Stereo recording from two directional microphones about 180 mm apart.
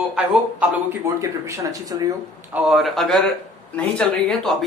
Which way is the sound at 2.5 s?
Centre (ahead or behind).